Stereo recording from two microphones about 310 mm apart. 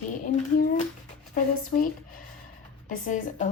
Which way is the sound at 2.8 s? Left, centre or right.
Left.